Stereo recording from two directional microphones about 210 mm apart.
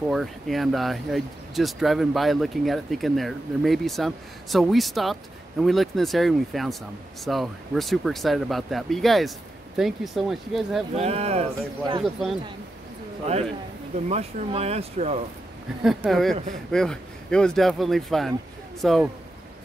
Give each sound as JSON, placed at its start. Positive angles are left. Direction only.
{"t": 0.1, "sound": "speech", "side_deg": 0}
{"t": 11.0, "sound": "speech", "side_deg": -30}
{"t": 12.0, "sound": "speech", "side_deg": 0}
{"t": 13.9, "sound": "speech", "side_deg": -30}
{"t": 15.8, "sound": "speech", "side_deg": 0}